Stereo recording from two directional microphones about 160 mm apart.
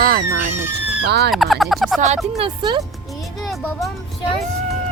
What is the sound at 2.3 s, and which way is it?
Speech, 30° right (ahead or behind).